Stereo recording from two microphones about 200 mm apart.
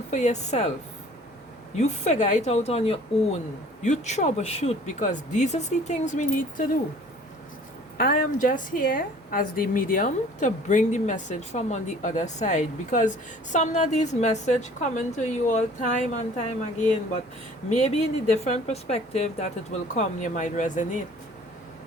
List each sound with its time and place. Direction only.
0.1 s a woman's voice: 35° left (ahead or behind)
1.7 s a woman's voice: 35° left (ahead or behind)
7.9 s a woman's voice: 45° left (ahead or behind)
17.7 s a woman's voice: 35° left (ahead or behind)